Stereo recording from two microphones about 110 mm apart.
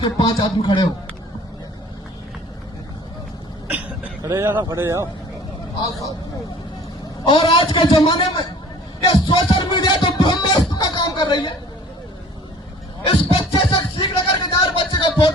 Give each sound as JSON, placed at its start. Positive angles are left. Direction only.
{"t": 0.0, "sound": "a man's voice", "side_deg": 45}
{"t": 3.7, "sound": "vehicle", "side_deg": -15}
{"t": 4.3, "sound": "speech", "side_deg": -20}
{"t": 7.3, "sound": "a man's voice", "side_deg": 45}
{"t": 9.0, "sound": "music", "side_deg": 40}
{"t": 13.1, "sound": "music", "side_deg": 50}
{"t": 14.5, "sound": "a sound", "side_deg": 45}